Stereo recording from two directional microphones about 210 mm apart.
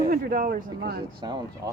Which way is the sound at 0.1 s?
40° right (ahead or behind).